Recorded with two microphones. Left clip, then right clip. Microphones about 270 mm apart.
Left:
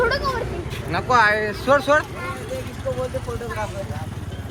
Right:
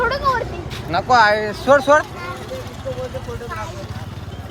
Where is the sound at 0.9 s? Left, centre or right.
Right.